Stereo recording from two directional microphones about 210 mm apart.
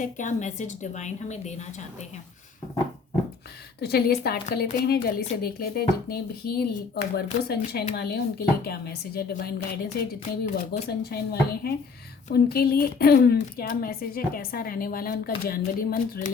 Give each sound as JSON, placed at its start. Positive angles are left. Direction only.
{"t": 0.0, "sound": "a woman's voice", "side_deg": 35}
{"t": 3.8, "sound": "a woman's voice", "side_deg": 50}